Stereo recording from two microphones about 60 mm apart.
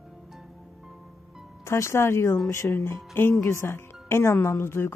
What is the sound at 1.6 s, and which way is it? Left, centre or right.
A woman's voice, left.